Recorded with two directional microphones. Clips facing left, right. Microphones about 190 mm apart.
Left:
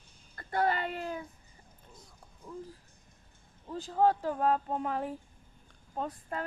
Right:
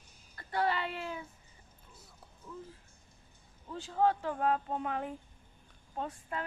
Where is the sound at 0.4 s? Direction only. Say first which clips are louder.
Left 2 dB; 50° left (ahead or behind).